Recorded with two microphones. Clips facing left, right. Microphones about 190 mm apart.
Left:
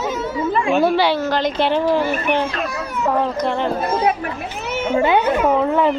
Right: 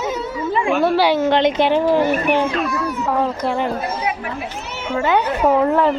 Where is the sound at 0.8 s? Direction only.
Centre (ahead or behind).